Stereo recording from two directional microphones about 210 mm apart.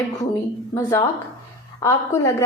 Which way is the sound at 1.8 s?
15° left (ahead or behind).